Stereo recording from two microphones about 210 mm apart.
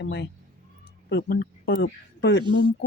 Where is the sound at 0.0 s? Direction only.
55° left (ahead or behind).